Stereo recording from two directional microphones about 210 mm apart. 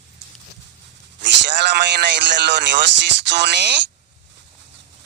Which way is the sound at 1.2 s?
55° right (ahead or behind).